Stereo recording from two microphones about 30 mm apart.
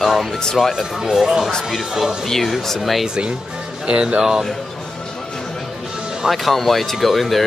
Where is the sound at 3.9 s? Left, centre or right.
Right.